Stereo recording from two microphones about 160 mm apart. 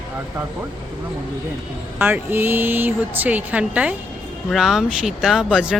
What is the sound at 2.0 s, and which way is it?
Speech, 10° right (ahead or behind).